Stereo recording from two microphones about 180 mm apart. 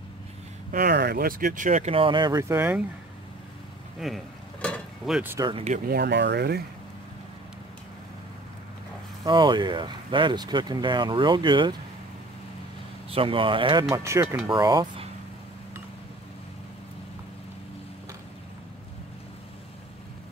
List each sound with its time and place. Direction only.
0.7 s speech: 55° right (ahead or behind); by 2.8 s 10° right (ahead or behind)
4.0 s a sound: 5° left (ahead or behind)
5.9 s speech: 65° right (ahead or behind)
9.2 s speech: 25° right (ahead or behind)
13.1 s speech: 30° right (ahead or behind)